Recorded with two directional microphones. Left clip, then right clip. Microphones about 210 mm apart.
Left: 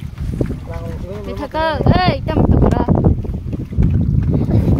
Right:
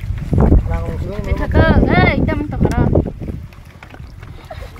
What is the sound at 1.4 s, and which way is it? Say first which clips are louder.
Speech: right 2 dB; 15° left (ahead or behind).